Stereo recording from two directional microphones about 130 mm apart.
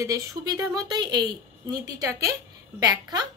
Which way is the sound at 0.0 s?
25° right (ahead or behind).